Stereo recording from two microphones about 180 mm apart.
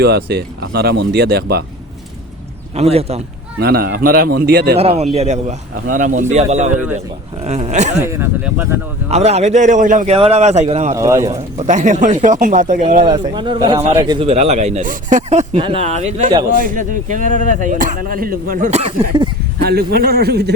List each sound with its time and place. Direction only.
0.0 s speech: 65° right (ahead or behind)
2.7 s speech: 35° right (ahead or behind)
3.6 s speech: 60° right (ahead or behind)
4.8 s speech: 35° right (ahead or behind)
7.9 s speech: 15° right (ahead or behind)
9.0 s speech: 35° right (ahead or behind)
10.2 s speech: 35° right (ahead or behind)
10.9 s speech: 15° right (ahead or behind)
11.3 s speech: 40° right (ahead or behind)
13.3 s speech: 25° right (ahead or behind); by 20.5 s 60° right (ahead or behind)